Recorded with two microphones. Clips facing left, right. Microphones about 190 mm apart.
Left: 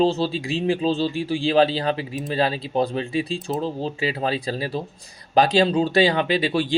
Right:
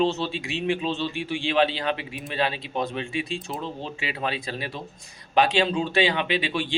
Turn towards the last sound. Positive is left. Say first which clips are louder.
# left 5 dB
turn(degrees=40)  # may be behind; listen again after turning